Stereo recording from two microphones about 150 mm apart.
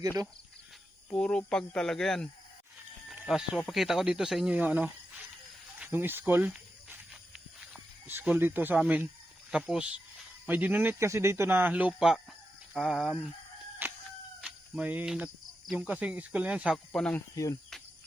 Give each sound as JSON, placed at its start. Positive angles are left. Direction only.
{"t": 1.1, "sound": "speech", "side_deg": 5}
{"t": 6.5, "sound": "snake", "side_deg": -5}
{"t": 8.0, "sound": "speech", "side_deg": -10}
{"t": 13.8, "sound": "chicken", "side_deg": -15}
{"t": 14.4, "sound": "speech", "side_deg": -10}
{"t": 17.3, "sound": "cricket", "side_deg": 20}